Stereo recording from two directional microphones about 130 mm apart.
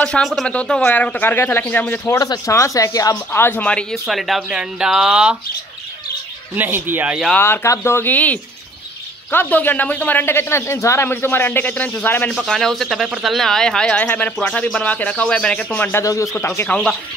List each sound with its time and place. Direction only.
0.0 s speech: 5° left (ahead or behind)
2.1 s speech: 30° left (ahead or behind)
3.3 s speech: 15° left (ahead or behind)
3.9 s speech: centre (ahead or behind)
6.5 s speech: 15° right (ahead or behind)
7.3 s speech: 15° left (ahead or behind)
12.4 s speech: centre (ahead or behind)
16.0 s speech: 25° left (ahead or behind)